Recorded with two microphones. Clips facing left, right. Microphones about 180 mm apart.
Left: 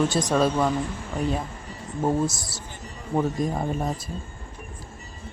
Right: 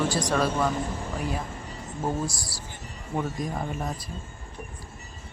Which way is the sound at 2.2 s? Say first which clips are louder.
Left 4 dB; 20° left (ahead or behind).